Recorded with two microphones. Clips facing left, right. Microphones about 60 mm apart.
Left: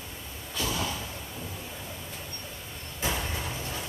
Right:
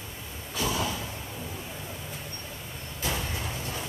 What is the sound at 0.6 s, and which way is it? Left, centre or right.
Vehicle, centre.